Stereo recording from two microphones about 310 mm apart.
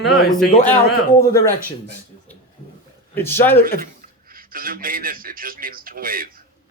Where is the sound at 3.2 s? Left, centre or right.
Centre.